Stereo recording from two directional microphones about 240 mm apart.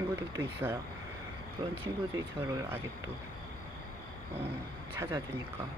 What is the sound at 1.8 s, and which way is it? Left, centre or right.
Speech, centre.